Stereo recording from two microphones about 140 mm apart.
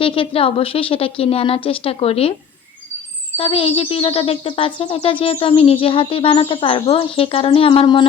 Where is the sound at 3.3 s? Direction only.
40° left (ahead or behind).